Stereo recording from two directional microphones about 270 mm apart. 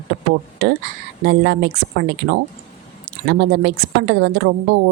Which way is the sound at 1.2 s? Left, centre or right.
Right.